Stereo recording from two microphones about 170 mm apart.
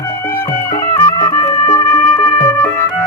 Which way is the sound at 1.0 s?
25° left (ahead or behind).